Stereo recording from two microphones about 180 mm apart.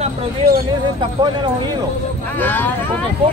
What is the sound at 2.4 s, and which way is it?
Speech, 10° left (ahead or behind).